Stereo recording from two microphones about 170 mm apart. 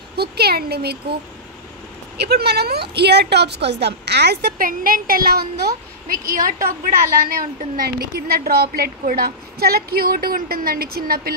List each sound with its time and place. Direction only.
0.1 s speech: 70° right (ahead or behind)
2.1 s a woman's voice: 75° right (ahead or behind)